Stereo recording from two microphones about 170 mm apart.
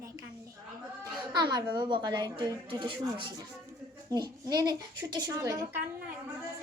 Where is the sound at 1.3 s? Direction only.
25° right (ahead or behind).